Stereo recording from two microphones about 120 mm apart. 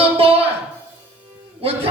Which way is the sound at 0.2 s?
50° right (ahead or behind).